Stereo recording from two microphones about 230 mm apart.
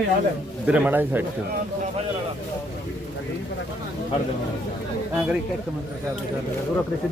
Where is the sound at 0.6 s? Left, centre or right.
Centre.